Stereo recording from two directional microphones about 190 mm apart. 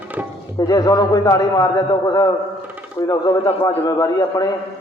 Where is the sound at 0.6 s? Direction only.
20° left (ahead or behind).